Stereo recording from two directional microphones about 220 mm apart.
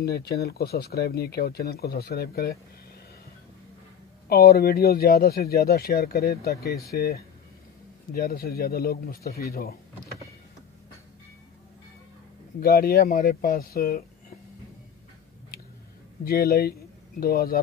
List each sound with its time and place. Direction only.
0.0 s speech: 45° left (ahead or behind)
4.3 s speech: 45° left (ahead or behind)
12.6 s speech: 45° left (ahead or behind)
16.3 s speech: 45° left (ahead or behind)